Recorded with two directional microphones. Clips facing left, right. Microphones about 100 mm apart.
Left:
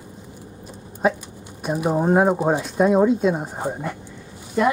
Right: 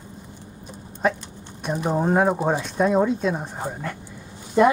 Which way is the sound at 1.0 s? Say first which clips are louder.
Left 2 dB; 10° left (ahead or behind).